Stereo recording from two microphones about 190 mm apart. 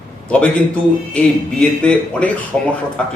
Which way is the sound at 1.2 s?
5° left (ahead or behind).